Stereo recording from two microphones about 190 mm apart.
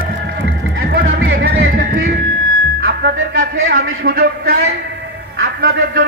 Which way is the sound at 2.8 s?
55° right (ahead or behind).